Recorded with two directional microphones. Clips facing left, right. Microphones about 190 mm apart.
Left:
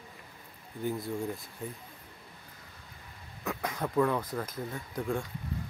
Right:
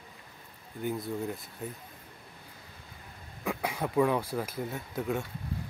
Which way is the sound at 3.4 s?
10° right (ahead or behind).